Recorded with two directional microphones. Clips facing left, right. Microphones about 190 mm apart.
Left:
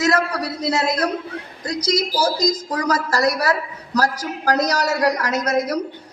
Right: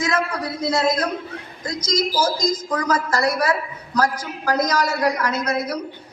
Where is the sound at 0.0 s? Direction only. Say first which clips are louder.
Left 3 dB; 75° left (ahead or behind).